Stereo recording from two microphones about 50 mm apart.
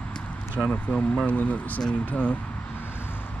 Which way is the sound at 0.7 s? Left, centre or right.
Left.